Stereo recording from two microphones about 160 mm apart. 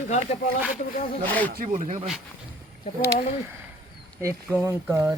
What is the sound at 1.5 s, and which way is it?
Speech, 50° right (ahead or behind).